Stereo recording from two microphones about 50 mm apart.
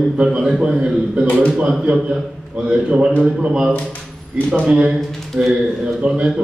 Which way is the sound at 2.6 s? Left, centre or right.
Right.